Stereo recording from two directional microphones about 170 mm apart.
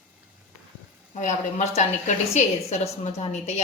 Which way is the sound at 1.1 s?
45° left (ahead or behind).